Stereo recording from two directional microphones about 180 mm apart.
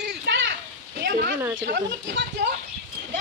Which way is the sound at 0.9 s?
55° right (ahead or behind).